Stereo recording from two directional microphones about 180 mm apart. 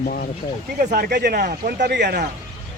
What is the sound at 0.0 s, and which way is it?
Speech, 55° left (ahead or behind).